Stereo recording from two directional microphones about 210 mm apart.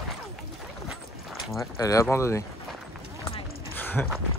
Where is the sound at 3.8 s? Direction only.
10° left (ahead or behind).